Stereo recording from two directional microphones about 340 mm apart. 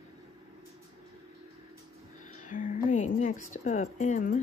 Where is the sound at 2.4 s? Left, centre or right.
Left.